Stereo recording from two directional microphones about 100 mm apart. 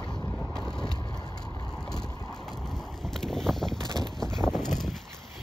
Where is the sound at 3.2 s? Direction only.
5° left (ahead or behind).